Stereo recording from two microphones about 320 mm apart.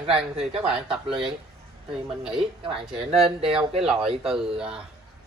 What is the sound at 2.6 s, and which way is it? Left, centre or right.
Speech, centre.